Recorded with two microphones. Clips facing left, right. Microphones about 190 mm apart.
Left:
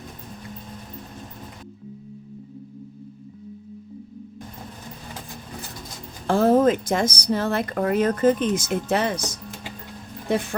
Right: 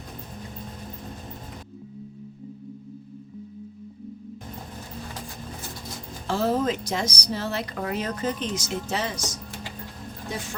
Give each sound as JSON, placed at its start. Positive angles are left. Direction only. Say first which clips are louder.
{"t": 6.2, "sound": "a woman's voice", "louder": "left 7 dB", "side_deg": 50}